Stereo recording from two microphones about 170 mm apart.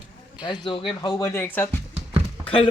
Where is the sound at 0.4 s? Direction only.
25° left (ahead or behind).